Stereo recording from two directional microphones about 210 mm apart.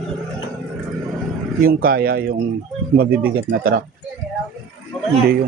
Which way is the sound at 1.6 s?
45° right (ahead or behind).